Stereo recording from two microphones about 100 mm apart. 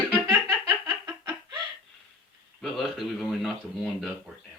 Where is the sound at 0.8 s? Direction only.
35° right (ahead or behind).